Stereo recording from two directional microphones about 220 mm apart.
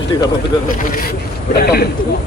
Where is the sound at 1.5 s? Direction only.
45° left (ahead or behind).